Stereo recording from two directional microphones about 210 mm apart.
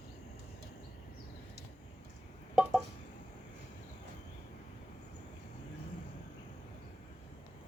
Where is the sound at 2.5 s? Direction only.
5° right (ahead or behind).